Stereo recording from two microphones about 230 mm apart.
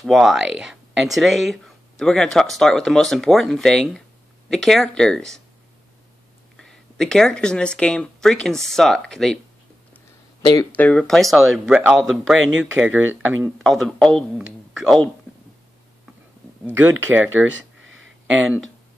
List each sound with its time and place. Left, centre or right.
0.0 s speech: centre
6.5 s speech: centre
10.4 s speech: centre
10.9 s speech: centre
16.6 s speech: centre
17.8 s a sound: right